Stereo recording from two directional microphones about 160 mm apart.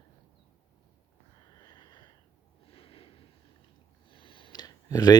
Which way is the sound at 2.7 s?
35° left (ahead or behind).